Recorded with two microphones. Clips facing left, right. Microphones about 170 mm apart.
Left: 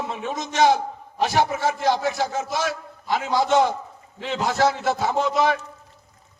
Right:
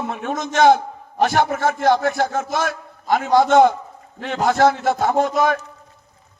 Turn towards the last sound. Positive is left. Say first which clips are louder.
# right 3 dB
turn(degrees=-50)  # may be behind; listen again after turning